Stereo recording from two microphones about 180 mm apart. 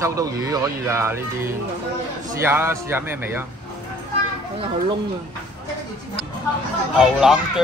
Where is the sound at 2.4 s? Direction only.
15° right (ahead or behind).